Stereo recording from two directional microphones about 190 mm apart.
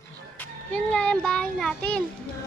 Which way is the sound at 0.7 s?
5° left (ahead or behind).